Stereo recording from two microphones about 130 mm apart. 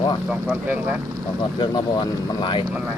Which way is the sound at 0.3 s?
15° right (ahead or behind).